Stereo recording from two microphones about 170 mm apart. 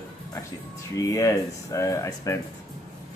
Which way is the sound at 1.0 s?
15° left (ahead or behind).